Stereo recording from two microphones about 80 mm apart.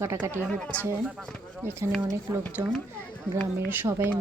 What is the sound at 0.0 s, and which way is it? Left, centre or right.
Speech, right.